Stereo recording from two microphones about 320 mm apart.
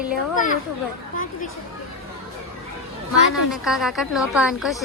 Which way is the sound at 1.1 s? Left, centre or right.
Left.